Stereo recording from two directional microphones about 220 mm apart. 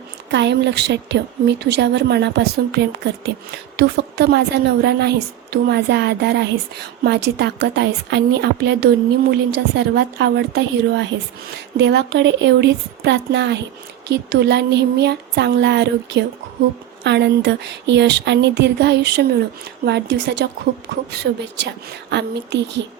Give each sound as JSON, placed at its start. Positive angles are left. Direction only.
{"t": 0.3, "sound": "a woman's voice", "side_deg": -50}